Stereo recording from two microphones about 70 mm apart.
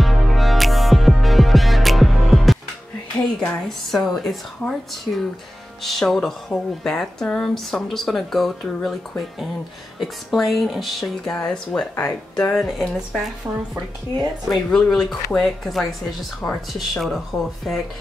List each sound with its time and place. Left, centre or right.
0.0 s music: centre
3.3 s speech: centre
9.9 s speech: centre
11.2 s speech: centre
12.6 s speech: centre
14.5 s speech: centre